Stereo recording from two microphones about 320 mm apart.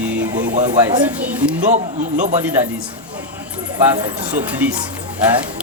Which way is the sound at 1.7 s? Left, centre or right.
Right.